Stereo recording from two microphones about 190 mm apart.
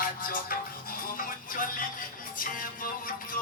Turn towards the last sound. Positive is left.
turn(degrees=45)  # may be behind; listen again after turning